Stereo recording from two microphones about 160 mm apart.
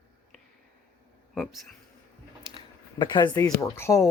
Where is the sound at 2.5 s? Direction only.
30° left (ahead or behind).